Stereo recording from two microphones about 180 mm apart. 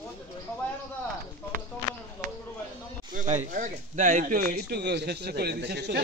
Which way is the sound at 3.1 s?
45° right (ahead or behind).